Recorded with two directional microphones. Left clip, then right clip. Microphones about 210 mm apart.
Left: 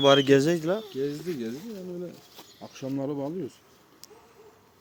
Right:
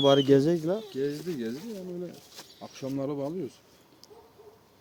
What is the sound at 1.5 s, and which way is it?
Speech, 30° left (ahead or behind).